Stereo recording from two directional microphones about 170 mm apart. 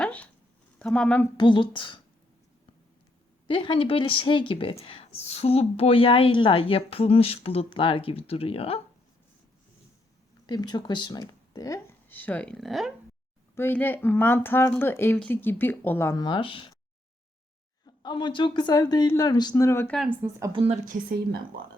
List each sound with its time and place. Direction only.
0.0 s a sound: 10° left (ahead or behind)
0.8 s speech: 5° left (ahead or behind)
1.4 s speech: 30° left (ahead or behind)
3.4 s a woman's voice: 30° left (ahead or behind)
10.4 s speech: 25° left (ahead or behind); by 12.9 s centre (ahead or behind)
13.6 s speech: 10° left (ahead or behind); by 16.7 s 30° left (ahead or behind)
17.8 s speech: 25° left (ahead or behind)
20.0 s speech: 10° right (ahead or behind)
20.5 s a woman's voice: 30° right (ahead or behind)
20.8 s a woman's voice: 60° right (ahead or behind)